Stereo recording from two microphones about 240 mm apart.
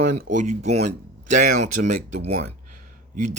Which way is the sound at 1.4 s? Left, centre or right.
Right.